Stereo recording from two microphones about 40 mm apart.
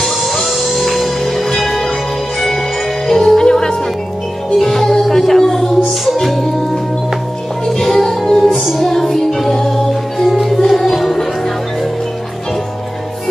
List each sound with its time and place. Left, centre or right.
0.0 s music: centre
3.1 s music: centre
10.2 s music: centre